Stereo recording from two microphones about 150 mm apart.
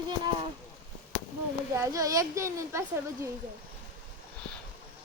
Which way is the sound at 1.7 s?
20° right (ahead or behind).